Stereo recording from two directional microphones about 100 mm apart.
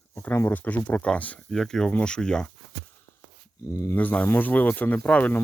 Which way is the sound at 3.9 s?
15° left (ahead or behind).